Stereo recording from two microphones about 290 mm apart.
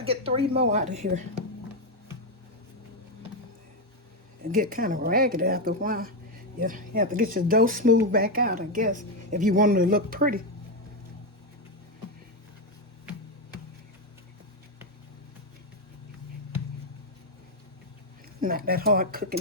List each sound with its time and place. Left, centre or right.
0.0 s speech: centre
4.4 s speech: right
18.3 s speech: right